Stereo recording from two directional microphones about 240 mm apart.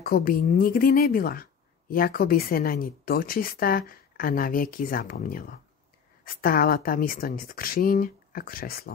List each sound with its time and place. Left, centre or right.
0.0 s speech: left